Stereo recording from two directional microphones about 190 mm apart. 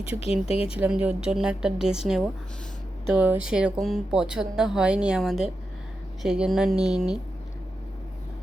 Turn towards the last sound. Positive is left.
turn(degrees=0)  # may be behind; listen again after turning